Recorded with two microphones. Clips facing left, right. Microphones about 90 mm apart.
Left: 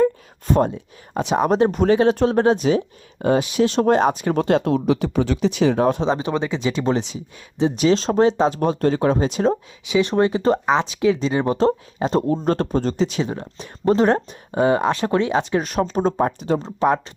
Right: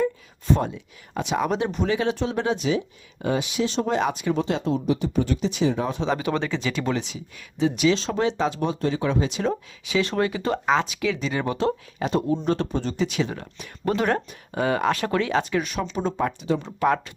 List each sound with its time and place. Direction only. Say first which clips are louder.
0.5 s speech: left 5 dB; 45° left (ahead or behind)
6.0 s speech: left 3 dB; 30° left (ahead or behind)
9.5 s speech: left 5 dB; 20° left (ahead or behind)
12.3 s speech: left 4 dB; 45° left (ahead or behind); by 15.6 s 25° left (ahead or behind)
15.6 s speech: left 6 dB; 40° left (ahead or behind)